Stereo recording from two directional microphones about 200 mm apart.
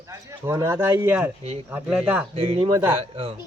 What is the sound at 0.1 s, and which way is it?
Speech, 15° right (ahead or behind).